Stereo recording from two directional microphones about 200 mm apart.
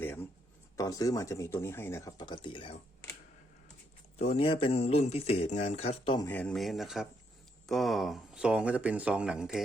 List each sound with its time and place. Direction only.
0.0 s a sound: 10° left (ahead or behind)
0.8 s speech: 15° left (ahead or behind)
4.2 s speech: 30° left (ahead or behind)
6.2 s speech: 10° left (ahead or behind)